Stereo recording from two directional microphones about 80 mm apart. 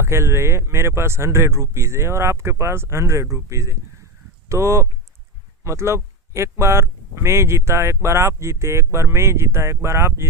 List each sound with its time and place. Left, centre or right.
0.0 s speech: right